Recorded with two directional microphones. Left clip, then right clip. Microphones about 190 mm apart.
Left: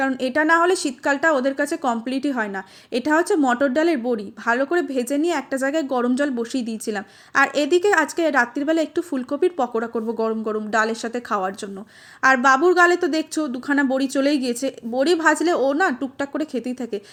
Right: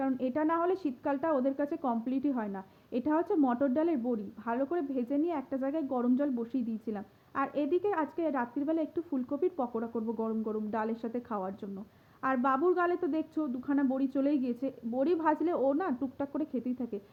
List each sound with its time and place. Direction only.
0.0 s a woman's voice: 15° left (ahead or behind)